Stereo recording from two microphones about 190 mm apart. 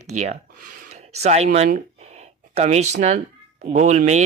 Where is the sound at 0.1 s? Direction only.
35° right (ahead or behind).